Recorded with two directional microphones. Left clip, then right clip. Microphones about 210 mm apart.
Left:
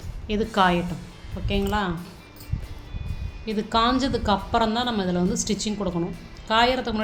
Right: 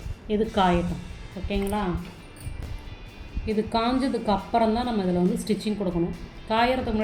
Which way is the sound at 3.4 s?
45° left (ahead or behind).